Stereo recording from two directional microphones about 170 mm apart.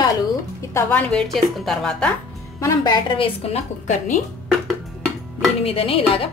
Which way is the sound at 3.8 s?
50° left (ahead or behind).